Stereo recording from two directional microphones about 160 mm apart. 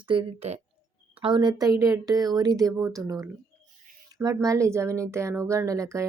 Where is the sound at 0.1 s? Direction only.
35° right (ahead or behind).